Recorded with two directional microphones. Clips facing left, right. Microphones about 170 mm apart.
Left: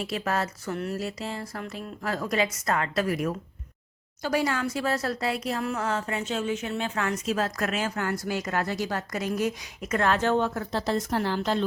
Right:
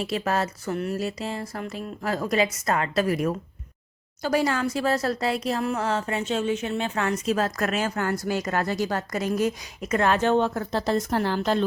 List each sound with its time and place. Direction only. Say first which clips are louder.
0.0 s speech: right 3 dB; 25° right (ahead or behind)
4.2 s speech: right 3 dB; 40° right (ahead or behind)
7.3 s a woman's voice: right 3 dB; 45° right (ahead or behind)
9.8 s speech: right 3 dB; 20° right (ahead or behind)
10.5 s a woman's voice: right 3 dB; 45° right (ahead or behind)